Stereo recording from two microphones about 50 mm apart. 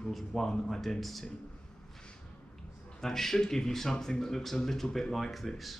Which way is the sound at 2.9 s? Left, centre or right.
Centre.